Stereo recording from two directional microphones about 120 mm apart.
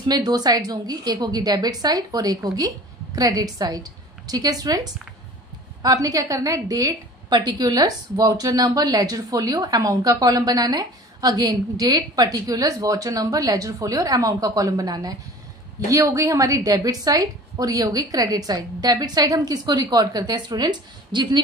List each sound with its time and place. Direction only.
0.0 s a woman's voice: 35° right (ahead or behind)